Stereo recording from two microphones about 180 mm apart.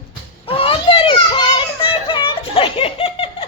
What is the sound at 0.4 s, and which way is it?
Children playing, 30° left (ahead or behind).